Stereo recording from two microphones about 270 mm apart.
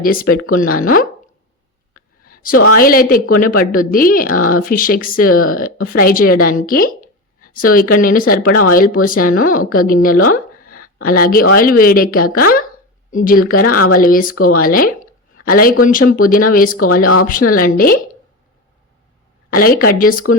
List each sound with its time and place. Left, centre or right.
0.0 s a woman's voice: left
2.2 s a sound: left
2.7 s a woman's voice: left
13.7 s speech: left
14.0 s a woman's voice: left
16.7 s speech: left
17.2 s a woman's voice: left
19.5 s a woman's voice: left